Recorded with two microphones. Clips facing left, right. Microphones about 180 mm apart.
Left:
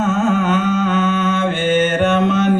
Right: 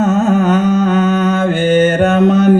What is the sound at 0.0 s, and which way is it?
Music, 40° right (ahead or behind).